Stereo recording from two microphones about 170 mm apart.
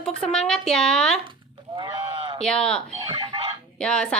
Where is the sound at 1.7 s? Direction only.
30° right (ahead or behind).